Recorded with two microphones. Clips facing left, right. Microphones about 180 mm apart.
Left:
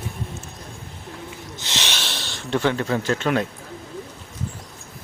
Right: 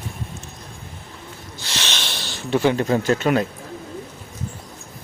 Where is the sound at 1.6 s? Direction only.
15° left (ahead or behind).